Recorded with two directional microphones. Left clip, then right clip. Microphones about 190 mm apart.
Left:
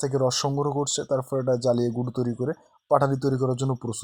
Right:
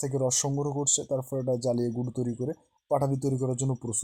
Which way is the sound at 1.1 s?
10° left (ahead or behind).